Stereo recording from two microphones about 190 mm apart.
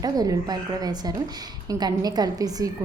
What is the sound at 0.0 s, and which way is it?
A woman's voice, 20° right (ahead or behind).